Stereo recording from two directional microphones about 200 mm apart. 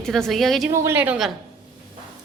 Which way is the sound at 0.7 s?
15° right (ahead or behind).